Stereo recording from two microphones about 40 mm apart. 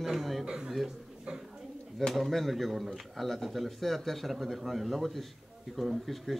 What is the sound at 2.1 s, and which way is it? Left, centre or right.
Speech, centre.